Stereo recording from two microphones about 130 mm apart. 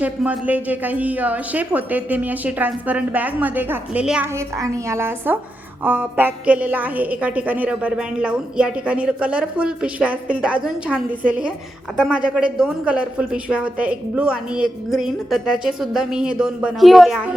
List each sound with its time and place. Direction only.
0.0 s a woman's voice: 10° right (ahead or behind)
4.4 s a woman's voice: 20° right (ahead or behind); by 17.3 s centre (ahead or behind)